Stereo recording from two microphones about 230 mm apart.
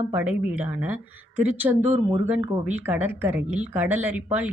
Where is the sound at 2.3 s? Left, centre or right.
Centre.